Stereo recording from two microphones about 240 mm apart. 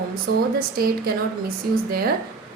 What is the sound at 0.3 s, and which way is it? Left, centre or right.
A woman's voice, right.